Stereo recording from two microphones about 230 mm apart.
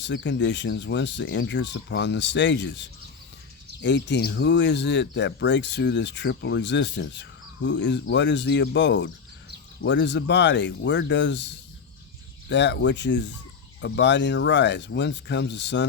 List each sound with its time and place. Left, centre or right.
0.0 s speech: left